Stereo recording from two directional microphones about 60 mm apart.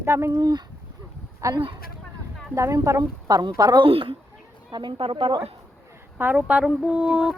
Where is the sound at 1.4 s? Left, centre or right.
Right.